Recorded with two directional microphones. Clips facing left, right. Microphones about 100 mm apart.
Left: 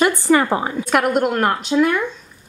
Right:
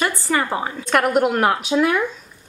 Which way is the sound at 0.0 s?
20° left (ahead or behind).